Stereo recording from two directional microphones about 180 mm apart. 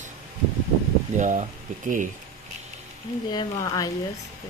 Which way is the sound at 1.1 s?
45° right (ahead or behind).